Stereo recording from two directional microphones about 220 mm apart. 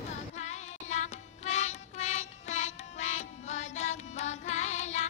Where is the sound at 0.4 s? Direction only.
30° left (ahead or behind).